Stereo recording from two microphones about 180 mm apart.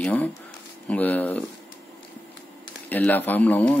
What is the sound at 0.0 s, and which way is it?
Speech, 10° left (ahead or behind).